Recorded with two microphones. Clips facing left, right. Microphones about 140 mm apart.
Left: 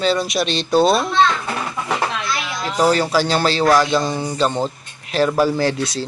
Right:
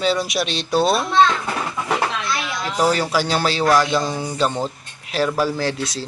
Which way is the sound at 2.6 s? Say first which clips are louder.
Left 2 dB; 15° left (ahead or behind).